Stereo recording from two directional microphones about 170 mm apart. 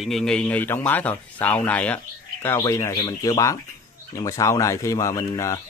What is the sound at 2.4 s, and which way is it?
Speech, 20° left (ahead or behind).